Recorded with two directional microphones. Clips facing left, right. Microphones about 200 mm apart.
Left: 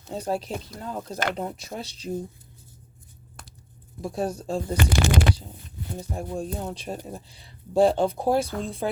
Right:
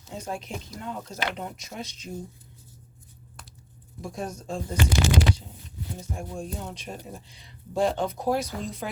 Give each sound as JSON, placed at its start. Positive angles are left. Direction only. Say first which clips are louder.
{"t": 0.1, "sound": "speech", "louder": "left 6 dB", "side_deg": 35}
{"t": 4.0, "sound": "speech", "louder": "left 6 dB", "side_deg": 35}
{"t": 4.8, "sound": "speech", "louder": "right 1 dB", "side_deg": 55}
{"t": 6.0, "sound": "speech", "louder": "left 5 dB", "side_deg": 35}